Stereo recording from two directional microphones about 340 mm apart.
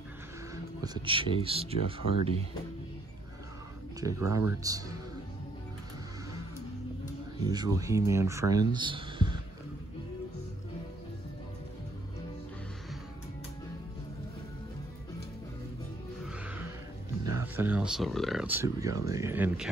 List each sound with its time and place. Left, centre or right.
0.7 s speech: centre
4.0 s speech: centre
7.4 s speech: centre
16.3 s music: centre
17.2 s speech: centre